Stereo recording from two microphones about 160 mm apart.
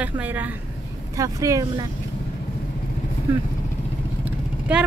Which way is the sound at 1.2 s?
20° right (ahead or behind).